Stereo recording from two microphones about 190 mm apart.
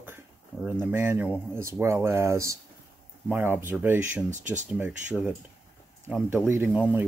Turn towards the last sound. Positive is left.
turn(degrees=-5)  # may be behind; listen again after turning